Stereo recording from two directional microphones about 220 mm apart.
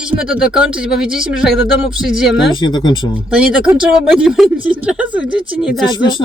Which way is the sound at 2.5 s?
20° left (ahead or behind).